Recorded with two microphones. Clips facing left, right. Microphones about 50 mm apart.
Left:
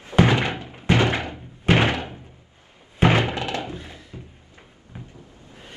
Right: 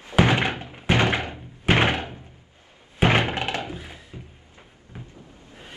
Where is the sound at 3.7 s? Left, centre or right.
Centre.